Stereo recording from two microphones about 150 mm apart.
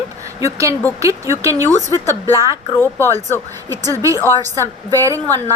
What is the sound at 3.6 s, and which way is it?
A woman's voice, 25° right (ahead or behind).